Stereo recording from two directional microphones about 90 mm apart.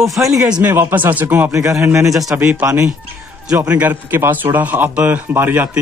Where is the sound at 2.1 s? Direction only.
5° right (ahead or behind).